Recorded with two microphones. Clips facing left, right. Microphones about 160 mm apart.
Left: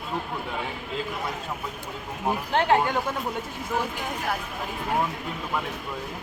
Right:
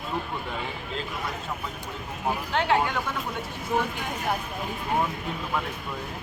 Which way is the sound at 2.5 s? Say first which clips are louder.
Left 3 dB; 40° left (ahead or behind).